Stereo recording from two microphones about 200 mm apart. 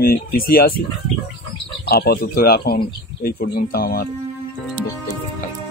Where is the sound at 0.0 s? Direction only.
50° left (ahead or behind).